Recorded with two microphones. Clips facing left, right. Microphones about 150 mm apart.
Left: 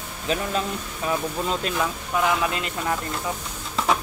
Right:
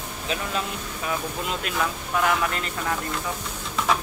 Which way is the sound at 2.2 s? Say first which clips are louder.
Left 1 dB; 15° left (ahead or behind).